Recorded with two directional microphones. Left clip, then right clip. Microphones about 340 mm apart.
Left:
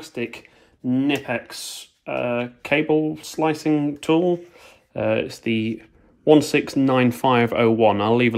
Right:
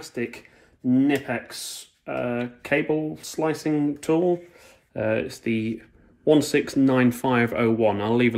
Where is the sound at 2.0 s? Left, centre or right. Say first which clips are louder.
Left 4 dB; left.